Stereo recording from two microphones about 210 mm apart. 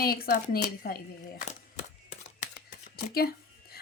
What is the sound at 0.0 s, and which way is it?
A woman's voice, 45° left (ahead or behind).